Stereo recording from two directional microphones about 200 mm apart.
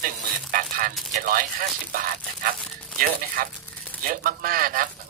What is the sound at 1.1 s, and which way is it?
Speech, 45° right (ahead or behind).